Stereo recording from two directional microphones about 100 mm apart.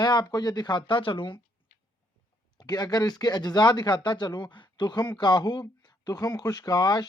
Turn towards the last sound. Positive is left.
turn(degrees=40)  # may be behind; listen again after turning